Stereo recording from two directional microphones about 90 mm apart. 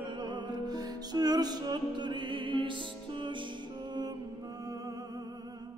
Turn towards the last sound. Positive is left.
turn(degrees=-40)  # may be behind; listen again after turning